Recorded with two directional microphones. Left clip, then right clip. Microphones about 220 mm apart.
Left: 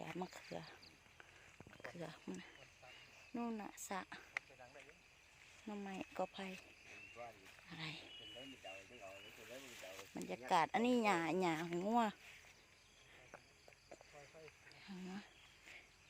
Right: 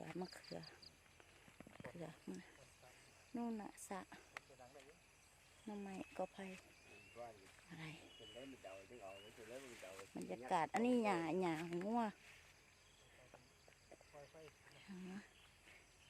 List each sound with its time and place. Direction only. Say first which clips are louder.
0.2 s speech: left 3 dB; centre (ahead or behind)
5.6 s speech: left 3 dB; 15° left (ahead or behind)
9.6 s speech: left 1 dB; 50° left (ahead or behind)
10.2 s speech: left 4 dB; 10° left (ahead or behind)
14.8 s speech: left 3 dB; 5° left (ahead or behind)